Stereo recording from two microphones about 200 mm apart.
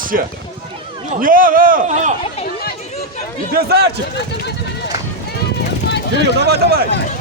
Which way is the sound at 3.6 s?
50° right (ahead or behind).